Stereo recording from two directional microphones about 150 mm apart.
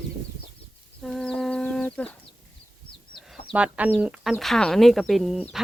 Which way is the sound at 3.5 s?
10° right (ahead or behind).